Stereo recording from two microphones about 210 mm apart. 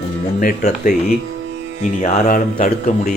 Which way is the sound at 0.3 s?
40° left (ahead or behind).